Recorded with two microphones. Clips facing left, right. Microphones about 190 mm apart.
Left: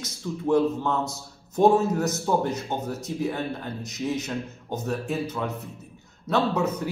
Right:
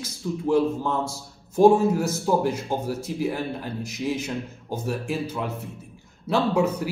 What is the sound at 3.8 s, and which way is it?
A man's voice, 10° right (ahead or behind).